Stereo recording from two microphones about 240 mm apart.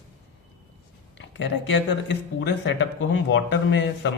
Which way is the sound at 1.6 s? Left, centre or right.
Left.